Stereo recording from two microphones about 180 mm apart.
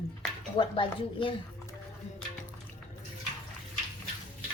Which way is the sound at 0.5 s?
30° left (ahead or behind).